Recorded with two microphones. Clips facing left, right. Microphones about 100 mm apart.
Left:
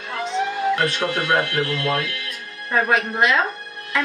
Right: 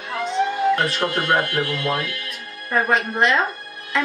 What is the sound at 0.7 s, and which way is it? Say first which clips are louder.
Speech: even; centre (ahead or behind).